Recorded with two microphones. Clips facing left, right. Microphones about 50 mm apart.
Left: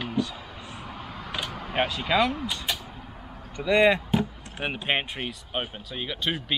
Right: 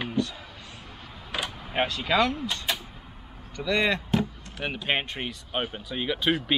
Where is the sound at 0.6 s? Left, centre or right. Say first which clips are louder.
Left 5 dB; left.